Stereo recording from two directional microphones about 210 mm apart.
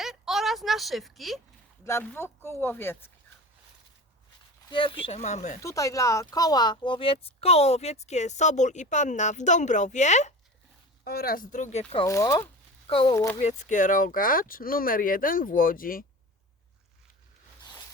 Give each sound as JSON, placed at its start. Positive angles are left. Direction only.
{"t": 0.0, "sound": "a sound", "side_deg": 0}
{"t": 1.8, "sound": "speech", "side_deg": 15}
{"t": 4.7, "sound": "a woman's voice", "side_deg": 25}
{"t": 5.6, "sound": "a woman's voice", "side_deg": 15}
{"t": 11.0, "sound": "a woman's voice", "side_deg": 50}
{"t": 12.0, "sound": "speech", "side_deg": 15}
{"t": 13.4, "sound": "a woman's voice", "side_deg": 35}
{"t": 17.6, "sound": "a sound", "side_deg": 20}